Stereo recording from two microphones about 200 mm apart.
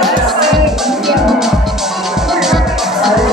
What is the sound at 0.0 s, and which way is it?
Music, centre (ahead or behind).